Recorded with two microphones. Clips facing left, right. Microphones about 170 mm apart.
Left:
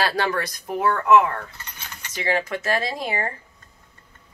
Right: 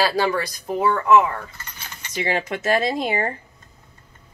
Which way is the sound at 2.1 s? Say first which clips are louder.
Even; 20° right (ahead or behind).